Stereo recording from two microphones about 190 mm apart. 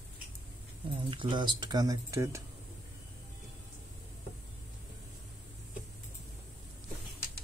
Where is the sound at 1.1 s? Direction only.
25° right (ahead or behind).